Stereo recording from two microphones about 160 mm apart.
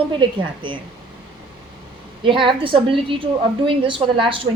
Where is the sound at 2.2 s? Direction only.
30° right (ahead or behind).